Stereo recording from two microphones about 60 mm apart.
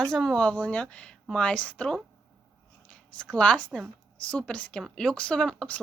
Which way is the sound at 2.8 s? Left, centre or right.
Centre.